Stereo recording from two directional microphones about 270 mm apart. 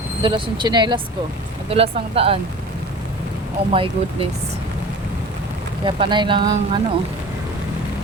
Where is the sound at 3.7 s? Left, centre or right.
Centre.